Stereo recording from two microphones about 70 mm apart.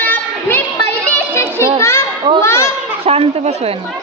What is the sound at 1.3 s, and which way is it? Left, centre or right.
Children playing, left.